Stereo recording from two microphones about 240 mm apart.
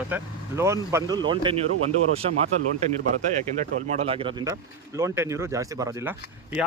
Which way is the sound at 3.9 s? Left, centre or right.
Right.